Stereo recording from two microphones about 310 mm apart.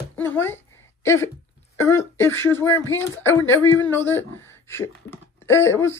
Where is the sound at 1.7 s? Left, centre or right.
Centre.